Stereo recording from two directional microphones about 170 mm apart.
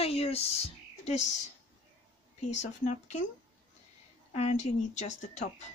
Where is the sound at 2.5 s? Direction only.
45° left (ahead or behind).